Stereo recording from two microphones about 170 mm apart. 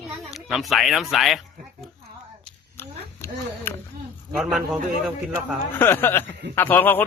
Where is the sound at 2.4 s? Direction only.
15° left (ahead or behind).